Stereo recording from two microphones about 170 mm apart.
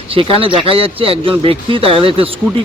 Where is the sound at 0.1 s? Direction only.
30° right (ahead or behind).